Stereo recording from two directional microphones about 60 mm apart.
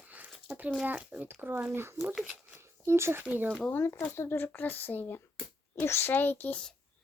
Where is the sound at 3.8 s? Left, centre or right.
Left.